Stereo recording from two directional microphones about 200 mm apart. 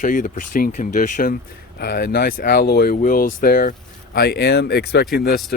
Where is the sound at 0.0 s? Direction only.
40° left (ahead or behind).